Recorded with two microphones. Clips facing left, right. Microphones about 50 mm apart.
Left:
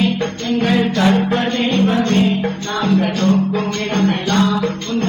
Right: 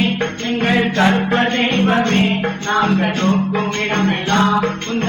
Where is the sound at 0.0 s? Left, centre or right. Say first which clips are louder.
Even; right.